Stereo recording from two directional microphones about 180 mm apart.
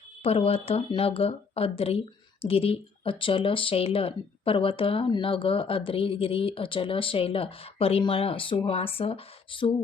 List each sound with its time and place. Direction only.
0.2 s speech: 35° left (ahead or behind)